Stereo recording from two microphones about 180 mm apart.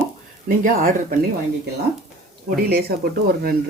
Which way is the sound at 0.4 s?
50° right (ahead or behind).